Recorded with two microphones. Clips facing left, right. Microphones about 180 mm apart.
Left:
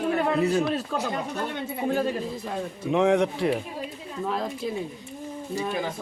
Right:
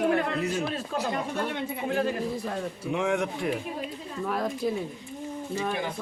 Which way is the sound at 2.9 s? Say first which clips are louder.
Left 6 dB; 35° left (ahead or behind).